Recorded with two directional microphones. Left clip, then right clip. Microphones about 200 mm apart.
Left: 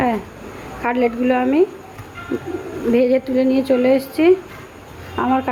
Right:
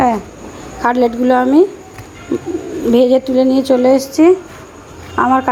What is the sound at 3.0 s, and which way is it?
Speech, 20° right (ahead or behind).